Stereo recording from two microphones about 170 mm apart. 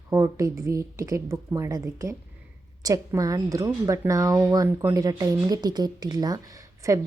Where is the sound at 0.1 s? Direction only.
20° right (ahead or behind).